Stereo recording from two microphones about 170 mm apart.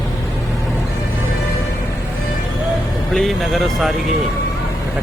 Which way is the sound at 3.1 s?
Centre (ahead or behind).